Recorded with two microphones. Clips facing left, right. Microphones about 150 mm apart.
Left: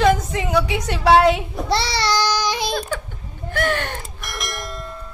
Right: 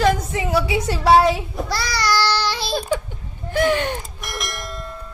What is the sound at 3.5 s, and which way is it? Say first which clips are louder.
Speech: right 4 dB; 15° right (ahead or behind).